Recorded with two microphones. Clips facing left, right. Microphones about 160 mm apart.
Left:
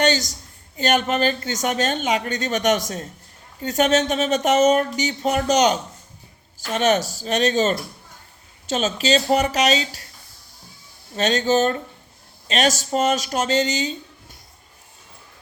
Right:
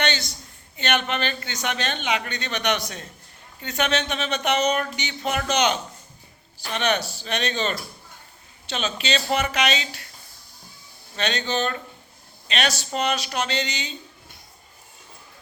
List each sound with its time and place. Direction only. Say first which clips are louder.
0.0 s a sound: left 6 dB; 40° left (ahead or behind)
0.8 s speech: left 5 dB; 40° left (ahead or behind)
11.2 s speech: left 7 dB; 45° left (ahead or behind)